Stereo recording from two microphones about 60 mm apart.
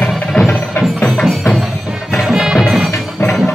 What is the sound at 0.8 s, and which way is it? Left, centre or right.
Music, centre.